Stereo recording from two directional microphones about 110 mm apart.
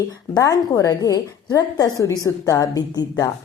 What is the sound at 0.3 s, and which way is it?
A woman's voice, 35° left (ahead or behind).